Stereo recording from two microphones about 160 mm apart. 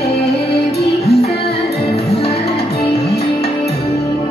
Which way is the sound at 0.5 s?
80° left.